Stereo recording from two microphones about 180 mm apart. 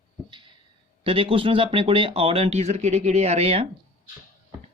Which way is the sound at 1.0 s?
30° right (ahead or behind).